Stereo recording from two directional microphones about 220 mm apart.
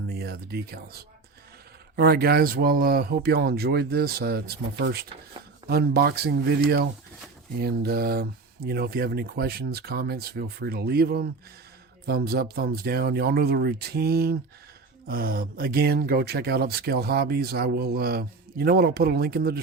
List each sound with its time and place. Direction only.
0.1 s speech: 45° right (ahead or behind)
2.0 s speech: 45° right (ahead or behind)